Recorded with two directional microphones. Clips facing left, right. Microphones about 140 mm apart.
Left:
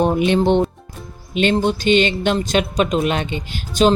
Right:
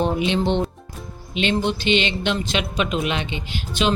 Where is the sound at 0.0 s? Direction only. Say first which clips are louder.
Left 5 dB; 50° left (ahead or behind).